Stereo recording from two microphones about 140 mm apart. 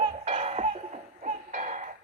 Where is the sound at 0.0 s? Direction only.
45° right (ahead or behind).